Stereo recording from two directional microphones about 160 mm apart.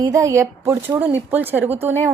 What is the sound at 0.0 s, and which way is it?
A woman's voice, 20° right (ahead or behind).